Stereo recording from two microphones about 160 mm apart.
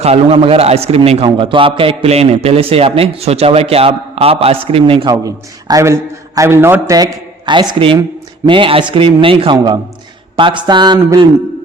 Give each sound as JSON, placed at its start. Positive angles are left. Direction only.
{"t": 0.0, "sound": "a man's voice", "side_deg": -40}
{"t": 5.1, "sound": "a man's voice", "side_deg": -20}
{"t": 6.9, "sound": "a man's voice", "side_deg": -25}